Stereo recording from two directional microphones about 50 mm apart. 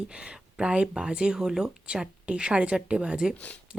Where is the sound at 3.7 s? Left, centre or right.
Centre.